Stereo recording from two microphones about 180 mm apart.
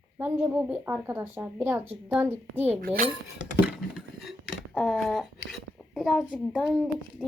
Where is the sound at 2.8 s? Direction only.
55° right (ahead or behind).